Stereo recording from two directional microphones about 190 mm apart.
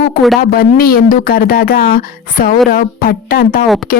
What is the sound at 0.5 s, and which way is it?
Speech, 50° left (ahead or behind).